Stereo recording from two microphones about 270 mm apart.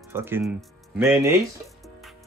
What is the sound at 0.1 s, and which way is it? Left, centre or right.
Speech, centre.